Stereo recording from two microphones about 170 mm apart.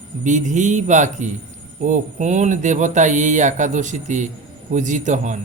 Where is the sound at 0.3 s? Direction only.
45° right (ahead or behind).